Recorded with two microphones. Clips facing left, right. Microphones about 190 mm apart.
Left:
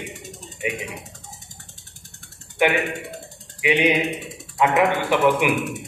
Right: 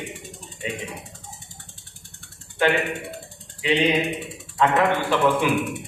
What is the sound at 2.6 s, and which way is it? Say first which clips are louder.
Speech: left 1 dB; 15° left (ahead or behind).